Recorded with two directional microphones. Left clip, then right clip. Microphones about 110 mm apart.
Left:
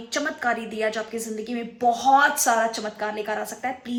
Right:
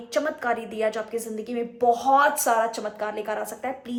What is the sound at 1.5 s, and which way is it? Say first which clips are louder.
A woman's voice: right 1 dB; 30° right (ahead or behind).